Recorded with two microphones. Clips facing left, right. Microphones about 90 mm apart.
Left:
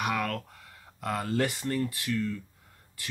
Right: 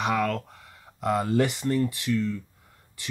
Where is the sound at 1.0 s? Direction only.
20° right (ahead or behind).